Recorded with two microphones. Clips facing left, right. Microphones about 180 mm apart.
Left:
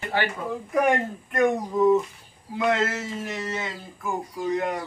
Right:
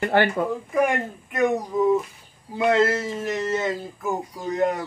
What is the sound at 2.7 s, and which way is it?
Speech, 35° right (ahead or behind).